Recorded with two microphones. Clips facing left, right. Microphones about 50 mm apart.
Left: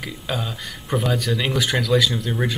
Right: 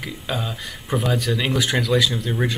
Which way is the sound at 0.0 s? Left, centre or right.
Centre.